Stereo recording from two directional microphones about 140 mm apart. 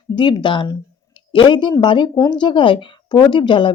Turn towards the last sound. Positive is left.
turn(degrees=35)  # may be behind; listen again after turning